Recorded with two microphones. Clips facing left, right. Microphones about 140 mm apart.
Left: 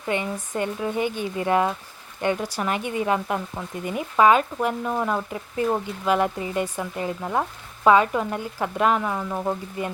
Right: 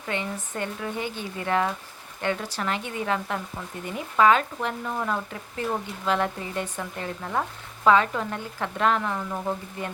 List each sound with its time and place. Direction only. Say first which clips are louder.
0.0 s speech: left 4 dB; 15° left (ahead or behind)